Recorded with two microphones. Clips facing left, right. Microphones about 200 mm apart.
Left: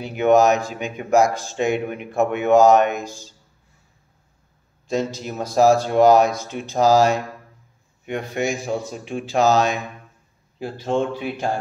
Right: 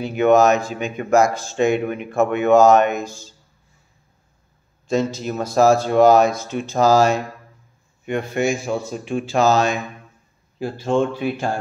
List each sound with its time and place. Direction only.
0.0 s speech: 15° left (ahead or behind)
4.8 s speech: 15° left (ahead or behind)